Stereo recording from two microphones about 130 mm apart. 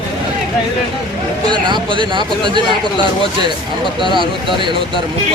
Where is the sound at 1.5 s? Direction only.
35° right (ahead or behind).